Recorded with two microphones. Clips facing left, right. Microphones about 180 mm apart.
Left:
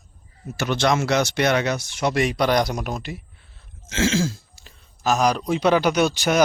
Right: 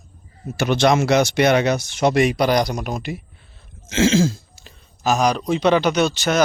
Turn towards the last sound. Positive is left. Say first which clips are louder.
# right 1 dB
turn(degrees=10)  # may be behind; listen again after turning